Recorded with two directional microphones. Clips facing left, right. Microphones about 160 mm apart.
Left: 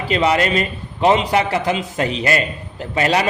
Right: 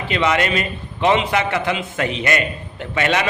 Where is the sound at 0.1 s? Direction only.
35° left (ahead or behind).